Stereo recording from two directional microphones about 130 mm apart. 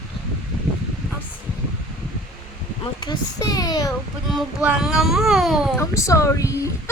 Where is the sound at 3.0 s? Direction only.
30° left (ahead or behind).